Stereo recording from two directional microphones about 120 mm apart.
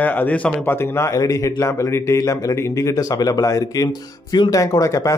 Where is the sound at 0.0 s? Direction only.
15° left (ahead or behind).